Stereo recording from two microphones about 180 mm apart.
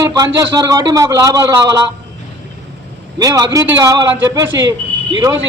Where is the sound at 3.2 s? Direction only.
20° right (ahead or behind).